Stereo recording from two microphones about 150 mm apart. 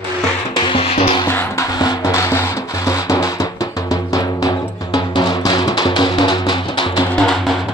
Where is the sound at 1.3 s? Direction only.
15° left (ahead or behind).